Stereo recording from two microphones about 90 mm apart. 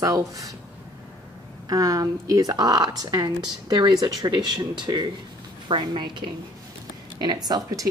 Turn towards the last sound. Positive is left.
turn(degrees=-45)  # may be behind; listen again after turning